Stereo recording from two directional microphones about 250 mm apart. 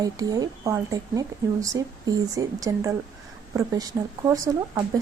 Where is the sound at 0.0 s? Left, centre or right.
Centre.